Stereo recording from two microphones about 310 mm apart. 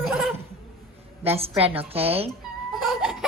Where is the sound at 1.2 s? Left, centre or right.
Centre.